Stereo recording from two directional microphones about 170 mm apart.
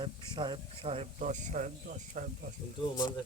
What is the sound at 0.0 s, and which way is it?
Speech, 25° right (ahead or behind).